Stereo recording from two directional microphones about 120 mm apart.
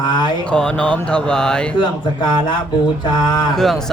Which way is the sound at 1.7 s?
40° left (ahead or behind).